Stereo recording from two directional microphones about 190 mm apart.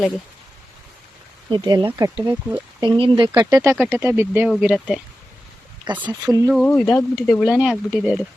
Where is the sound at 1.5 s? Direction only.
25° right (ahead or behind); by 4.9 s 5° right (ahead or behind).